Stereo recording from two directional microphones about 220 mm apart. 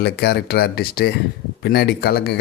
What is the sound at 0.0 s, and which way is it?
A man's voice, 50° left (ahead or behind).